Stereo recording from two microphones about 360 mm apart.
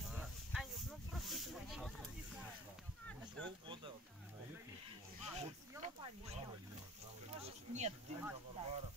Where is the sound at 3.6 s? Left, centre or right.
Centre.